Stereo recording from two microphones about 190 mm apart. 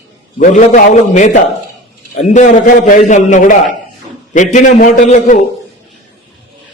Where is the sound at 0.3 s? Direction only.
40° left (ahead or behind).